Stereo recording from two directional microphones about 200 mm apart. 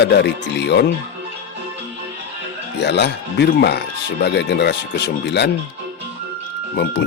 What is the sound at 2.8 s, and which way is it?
Speech, 60° left (ahead or behind).